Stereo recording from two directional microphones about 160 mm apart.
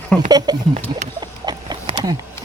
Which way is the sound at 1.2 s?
25° right (ahead or behind).